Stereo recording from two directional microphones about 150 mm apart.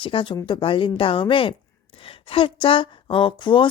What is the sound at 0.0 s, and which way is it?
Speech, 35° left (ahead or behind).